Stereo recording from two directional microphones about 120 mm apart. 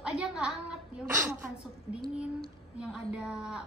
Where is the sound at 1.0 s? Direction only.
20° right (ahead or behind).